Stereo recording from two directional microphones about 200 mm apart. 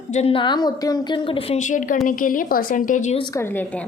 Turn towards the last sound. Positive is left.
turn(degrees=10)  # may be behind; listen again after turning